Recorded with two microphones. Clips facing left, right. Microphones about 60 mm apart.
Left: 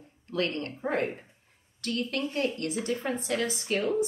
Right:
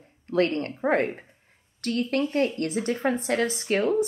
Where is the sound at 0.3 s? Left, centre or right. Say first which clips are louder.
Right 7 dB; right.